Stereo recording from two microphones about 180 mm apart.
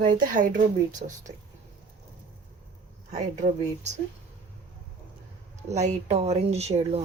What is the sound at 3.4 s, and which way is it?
Speech, 40° right (ahead or behind).